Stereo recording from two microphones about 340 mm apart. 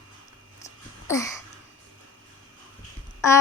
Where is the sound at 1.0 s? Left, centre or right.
Centre.